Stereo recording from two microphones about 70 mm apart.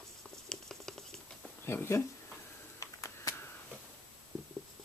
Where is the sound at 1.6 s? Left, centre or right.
Left.